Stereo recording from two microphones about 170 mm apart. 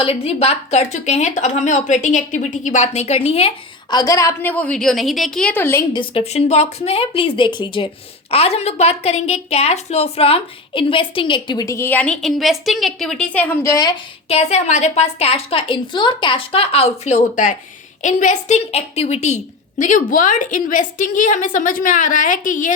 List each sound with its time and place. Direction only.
0.0 s a woman's voice: 35° left (ahead or behind)
3.9 s a woman's voice: 20° left (ahead or behind)
5.9 s a woman's voice: 30° left (ahead or behind)
14.3 s a woman's voice: 35° left (ahead or behind)